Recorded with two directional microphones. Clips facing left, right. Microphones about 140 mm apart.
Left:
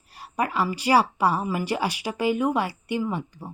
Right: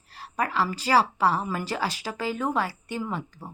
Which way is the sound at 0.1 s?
15° left (ahead or behind).